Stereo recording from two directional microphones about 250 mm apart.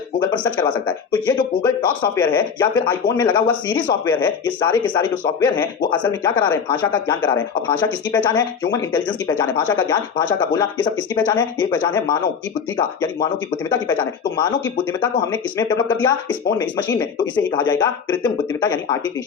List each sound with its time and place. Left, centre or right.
0.3 s speech: centre
5.9 s speech: centre
6.2 s speech: centre